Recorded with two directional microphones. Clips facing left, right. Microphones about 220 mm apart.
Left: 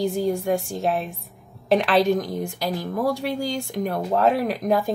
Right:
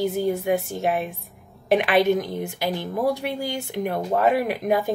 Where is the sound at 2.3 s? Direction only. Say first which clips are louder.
Even; centre (ahead or behind).